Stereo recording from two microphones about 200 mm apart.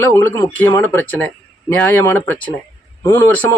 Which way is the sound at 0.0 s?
10° left (ahead or behind).